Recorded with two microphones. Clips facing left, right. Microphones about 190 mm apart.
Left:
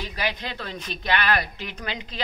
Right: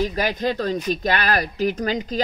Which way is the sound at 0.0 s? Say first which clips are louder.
Right 8 dB; 45° right (ahead or behind).